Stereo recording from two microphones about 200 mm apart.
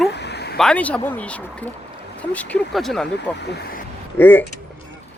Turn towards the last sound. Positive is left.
turn(degrees=10)  # may be behind; listen again after turning